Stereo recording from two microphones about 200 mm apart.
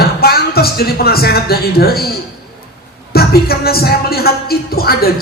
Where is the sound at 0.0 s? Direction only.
50° left (ahead or behind).